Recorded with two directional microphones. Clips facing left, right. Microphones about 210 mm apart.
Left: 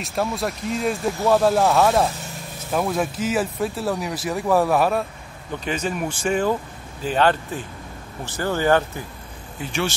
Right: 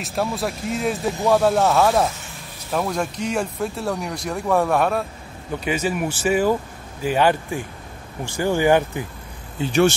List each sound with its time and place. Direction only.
0.0 s speech: centre (ahead or behind)
5.6 s speech: 10° right (ahead or behind)
9.6 s speech: 40° right (ahead or behind)